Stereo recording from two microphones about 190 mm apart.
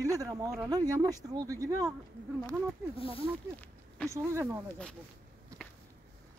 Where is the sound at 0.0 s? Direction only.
15° right (ahead or behind).